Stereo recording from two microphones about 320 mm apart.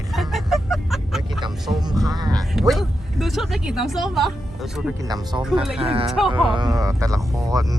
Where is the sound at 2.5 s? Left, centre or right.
Centre.